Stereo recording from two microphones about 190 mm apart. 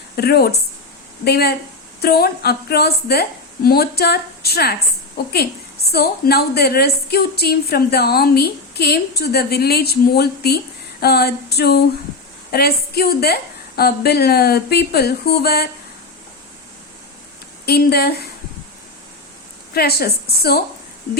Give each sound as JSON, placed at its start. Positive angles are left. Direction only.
{"t": 0.2, "sound": "a woman's voice", "side_deg": 55}
{"t": 17.7, "sound": "a woman's voice", "side_deg": 55}
{"t": 19.7, "sound": "a woman's voice", "side_deg": 55}